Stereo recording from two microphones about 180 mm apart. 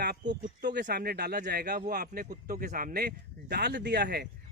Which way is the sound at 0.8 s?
60° right (ahead or behind).